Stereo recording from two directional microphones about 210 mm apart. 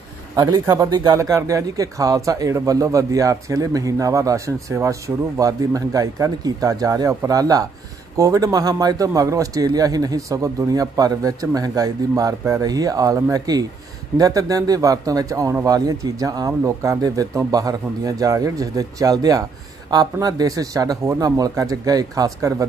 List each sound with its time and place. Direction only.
0.4 s speech: 20° right (ahead or behind)